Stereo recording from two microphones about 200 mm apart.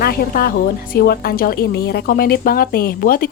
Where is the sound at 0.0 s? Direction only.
45° left (ahead or behind).